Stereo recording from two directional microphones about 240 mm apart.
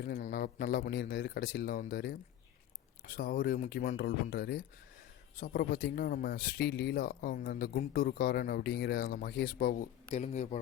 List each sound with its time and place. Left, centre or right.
0.0 s speech: left